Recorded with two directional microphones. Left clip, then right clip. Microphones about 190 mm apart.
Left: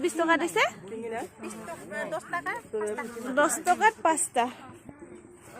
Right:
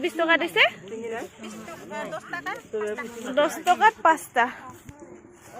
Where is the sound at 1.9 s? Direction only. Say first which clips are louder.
Even; 30° left (ahead or behind).